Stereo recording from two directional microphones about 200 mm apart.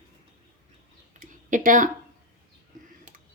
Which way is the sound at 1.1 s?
40° right (ahead or behind).